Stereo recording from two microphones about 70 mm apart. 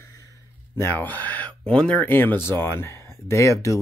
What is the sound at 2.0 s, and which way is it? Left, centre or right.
Speech, left.